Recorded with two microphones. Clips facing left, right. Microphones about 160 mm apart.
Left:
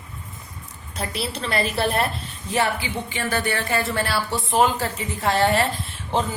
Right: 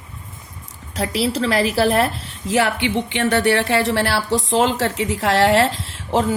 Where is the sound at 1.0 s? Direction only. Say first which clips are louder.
Right 8 dB; 80° right.